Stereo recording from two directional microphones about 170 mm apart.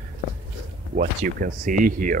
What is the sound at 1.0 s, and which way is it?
Speech, 55° right (ahead or behind).